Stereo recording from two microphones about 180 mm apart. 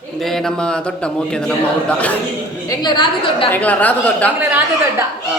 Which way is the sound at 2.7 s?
25° left (ahead or behind).